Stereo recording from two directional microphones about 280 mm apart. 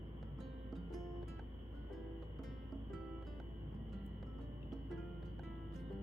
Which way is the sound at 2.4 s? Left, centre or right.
Centre.